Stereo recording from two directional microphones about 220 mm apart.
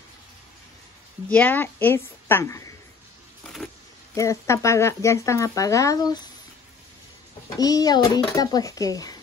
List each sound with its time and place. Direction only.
1.3 s speech: 10° left (ahead or behind)
3.4 s a sound: centre (ahead or behind)
4.1 s speech: 15° left (ahead or behind)
7.5 s speech: 15° left (ahead or behind)